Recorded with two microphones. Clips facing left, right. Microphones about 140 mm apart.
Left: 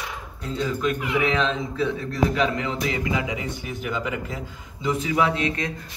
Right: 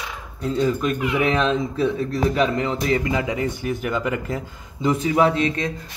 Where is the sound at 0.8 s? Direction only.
45° right (ahead or behind).